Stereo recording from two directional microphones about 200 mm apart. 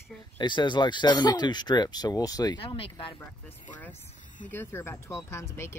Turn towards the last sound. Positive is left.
turn(degrees=15)  # may be behind; listen again after turning